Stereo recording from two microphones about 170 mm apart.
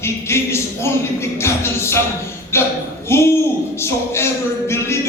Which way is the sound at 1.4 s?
15° left (ahead or behind).